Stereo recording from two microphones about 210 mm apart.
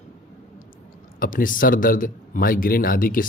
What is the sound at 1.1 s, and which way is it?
A man's voice, 40° left (ahead or behind).